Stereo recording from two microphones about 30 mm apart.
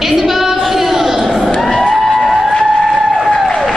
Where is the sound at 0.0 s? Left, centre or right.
Centre.